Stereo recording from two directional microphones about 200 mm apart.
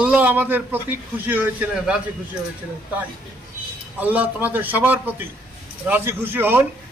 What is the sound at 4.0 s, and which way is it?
A man's voice, 10° right (ahead or behind).